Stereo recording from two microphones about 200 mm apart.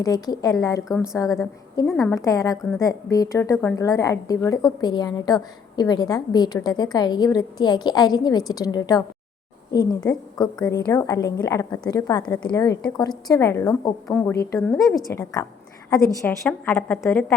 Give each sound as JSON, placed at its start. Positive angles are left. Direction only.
{"t": 0.0, "sound": "a woman's voice", "side_deg": 20}